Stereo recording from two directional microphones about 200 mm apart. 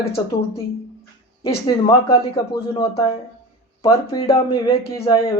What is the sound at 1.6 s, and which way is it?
Speech, 20° left (ahead or behind).